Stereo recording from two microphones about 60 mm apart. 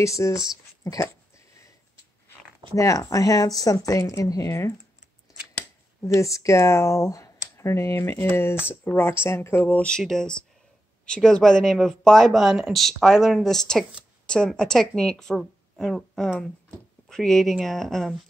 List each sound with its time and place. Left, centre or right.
0.0 s speech: left
2.7 s speech: left
3.8 s speech: left
6.0 s speech: left
9.8 s speech: centre
14.2 s a sound: centre
14.5 s a woman's voice: centre